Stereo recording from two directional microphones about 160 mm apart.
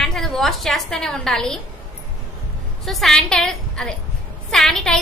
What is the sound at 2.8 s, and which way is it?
A woman's voice, centre (ahead or behind).